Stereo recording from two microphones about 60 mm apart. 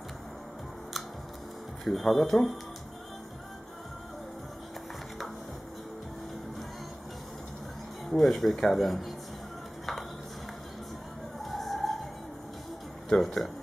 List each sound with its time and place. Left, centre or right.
1.9 s speech: centre
8.1 s speech: centre
11.4 s a sound: centre
13.1 s speech: centre